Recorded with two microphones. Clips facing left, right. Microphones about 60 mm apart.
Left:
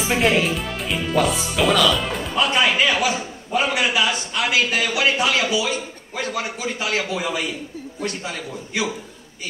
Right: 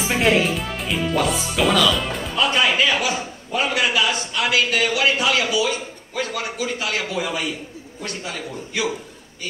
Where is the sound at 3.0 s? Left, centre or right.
Centre.